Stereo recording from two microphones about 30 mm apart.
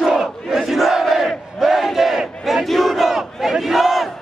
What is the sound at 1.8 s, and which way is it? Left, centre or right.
Battle cry, centre.